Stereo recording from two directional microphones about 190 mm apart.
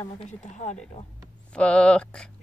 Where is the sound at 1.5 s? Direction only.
5° left (ahead or behind).